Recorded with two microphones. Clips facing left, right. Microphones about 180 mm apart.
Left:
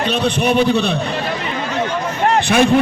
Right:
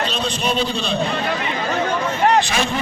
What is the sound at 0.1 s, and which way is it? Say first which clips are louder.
Speech: left 6 dB; 60° left (ahead or behind).